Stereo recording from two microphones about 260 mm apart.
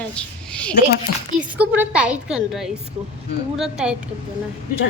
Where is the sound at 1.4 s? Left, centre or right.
Centre.